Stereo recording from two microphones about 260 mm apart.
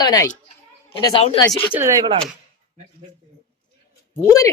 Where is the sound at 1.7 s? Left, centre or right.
Centre.